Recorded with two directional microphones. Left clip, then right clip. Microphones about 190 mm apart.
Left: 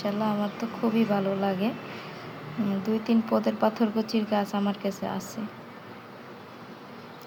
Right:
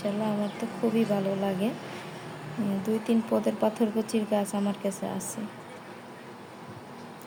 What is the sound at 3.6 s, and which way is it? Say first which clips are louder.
Speech: left 1 dB; 25° right (ahead or behind).